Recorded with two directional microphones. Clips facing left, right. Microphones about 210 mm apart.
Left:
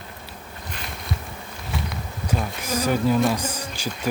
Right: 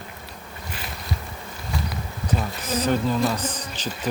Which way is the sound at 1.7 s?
Centre (ahead or behind).